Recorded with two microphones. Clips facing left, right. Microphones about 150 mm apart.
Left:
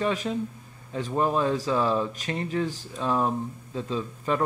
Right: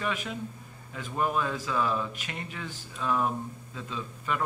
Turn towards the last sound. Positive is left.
turn(degrees=35)  # may be behind; listen again after turning